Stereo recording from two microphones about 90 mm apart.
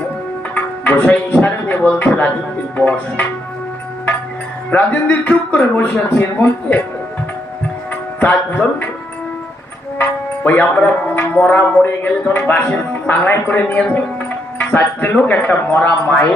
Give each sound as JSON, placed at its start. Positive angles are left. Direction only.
{"t": 0.5, "sound": "music", "side_deg": 15}
{"t": 1.9, "sound": "speech", "side_deg": 15}
{"t": 2.7, "sound": "music", "side_deg": 15}
{"t": 4.7, "sound": "speech", "side_deg": 20}
{"t": 8.2, "sound": "music", "side_deg": 15}
{"t": 10.0, "sound": "speech", "side_deg": 20}